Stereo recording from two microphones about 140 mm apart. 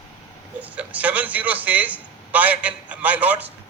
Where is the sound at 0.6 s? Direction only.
10° right (ahead or behind).